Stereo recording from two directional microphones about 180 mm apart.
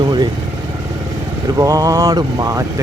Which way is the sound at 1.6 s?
20° right (ahead or behind).